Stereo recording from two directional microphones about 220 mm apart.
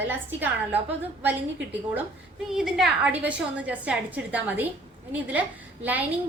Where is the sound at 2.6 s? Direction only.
Centre (ahead or behind).